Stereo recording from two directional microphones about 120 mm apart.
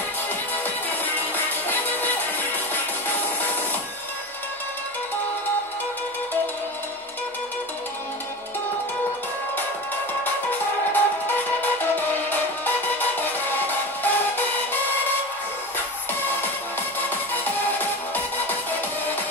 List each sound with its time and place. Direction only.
0.8 s music: 15° left (ahead or behind)
10.9 s music: 15° left (ahead or behind)
17.3 s music: 15° left (ahead or behind)